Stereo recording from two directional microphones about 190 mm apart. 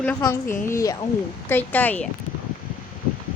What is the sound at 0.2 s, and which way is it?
Speech, 15° left (ahead or behind).